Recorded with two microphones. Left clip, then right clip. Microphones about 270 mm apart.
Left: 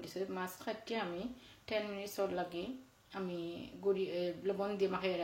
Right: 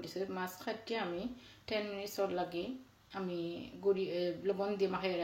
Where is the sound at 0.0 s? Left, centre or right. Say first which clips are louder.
Right 1 dB; centre.